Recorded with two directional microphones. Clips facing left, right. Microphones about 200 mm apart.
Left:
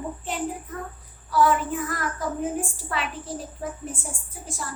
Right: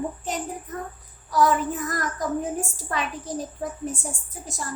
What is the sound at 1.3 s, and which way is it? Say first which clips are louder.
A woman's voice: even; 40° right (ahead or behind).